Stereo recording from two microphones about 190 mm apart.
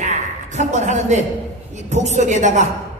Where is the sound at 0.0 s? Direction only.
35° right (ahead or behind).